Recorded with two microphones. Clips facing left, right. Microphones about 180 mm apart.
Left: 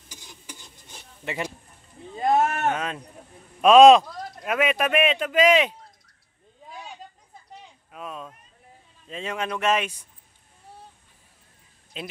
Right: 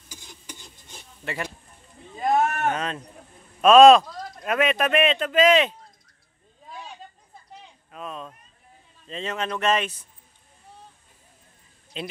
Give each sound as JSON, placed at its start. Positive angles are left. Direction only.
{"t": 1.2, "sound": "speech", "side_deg": 15}
{"t": 2.2, "sound": "a sound", "side_deg": 25}
{"t": 2.7, "sound": "speech", "side_deg": 10}
{"t": 7.9, "sound": "a sound", "side_deg": 10}
{"t": 9.0, "sound": "speech", "side_deg": 10}
{"t": 11.9, "sound": "speech", "side_deg": 5}